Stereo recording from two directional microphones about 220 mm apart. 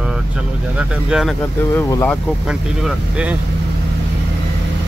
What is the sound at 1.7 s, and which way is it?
Speech, 10° left (ahead or behind).